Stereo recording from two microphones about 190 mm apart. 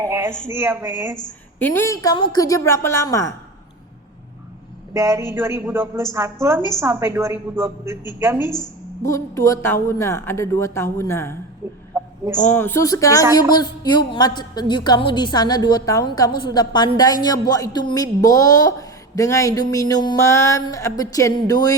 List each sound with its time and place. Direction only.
0.0 s a sound: 15° right (ahead or behind)
0.3 s a woman's voice: 40° left (ahead or behind)
0.5 s a woman's voice: 10° right (ahead or behind)
1.5 s a woman's voice: 10° left (ahead or behind)
4.9 s a woman's voice: 15° right (ahead or behind)
9.0 s a woman's voice: 15° left (ahead or behind)
11.6 s a sound: 10° right (ahead or behind)
12.5 s a woman's voice: 10° left (ahead or behind)